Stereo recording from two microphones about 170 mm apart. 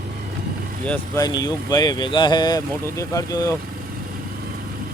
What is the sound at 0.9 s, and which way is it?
Speech, 20° left (ahead or behind).